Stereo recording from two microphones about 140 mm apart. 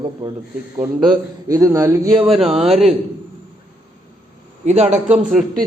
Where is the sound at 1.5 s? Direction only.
25° right (ahead or behind).